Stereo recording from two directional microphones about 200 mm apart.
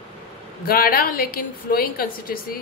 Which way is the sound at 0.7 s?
45° left (ahead or behind).